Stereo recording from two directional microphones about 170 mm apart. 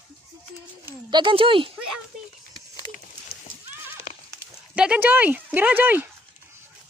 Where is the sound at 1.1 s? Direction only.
30° right (ahead or behind).